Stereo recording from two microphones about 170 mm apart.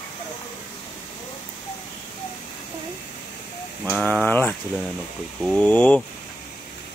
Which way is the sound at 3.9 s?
10° left (ahead or behind).